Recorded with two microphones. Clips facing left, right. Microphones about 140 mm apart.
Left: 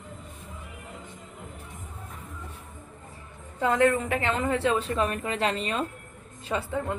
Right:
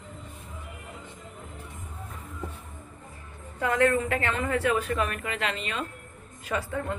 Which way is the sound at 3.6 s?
20° left (ahead or behind).